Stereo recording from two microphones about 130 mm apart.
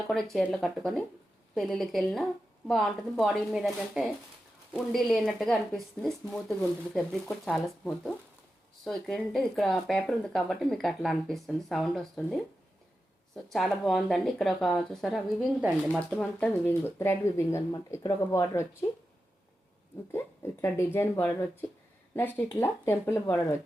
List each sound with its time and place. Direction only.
0.1 s speech: centre (ahead or behind); by 18.9 s 20° left (ahead or behind)
20.1 s speech: 20° left (ahead or behind)